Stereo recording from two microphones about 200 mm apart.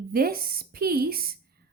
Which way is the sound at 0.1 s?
50° right (ahead or behind).